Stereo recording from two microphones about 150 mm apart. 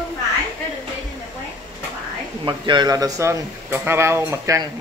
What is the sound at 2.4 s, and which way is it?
Speech, 30° right (ahead or behind).